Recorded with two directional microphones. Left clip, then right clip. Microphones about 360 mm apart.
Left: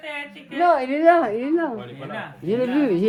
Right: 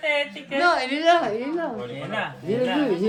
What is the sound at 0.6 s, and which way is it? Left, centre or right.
Speech, centre.